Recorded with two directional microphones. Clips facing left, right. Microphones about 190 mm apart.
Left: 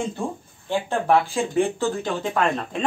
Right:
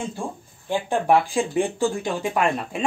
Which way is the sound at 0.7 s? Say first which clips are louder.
Right 1 dB; 15° right (ahead or behind).